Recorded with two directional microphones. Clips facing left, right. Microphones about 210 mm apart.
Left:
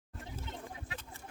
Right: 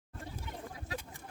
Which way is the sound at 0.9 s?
40° right (ahead or behind).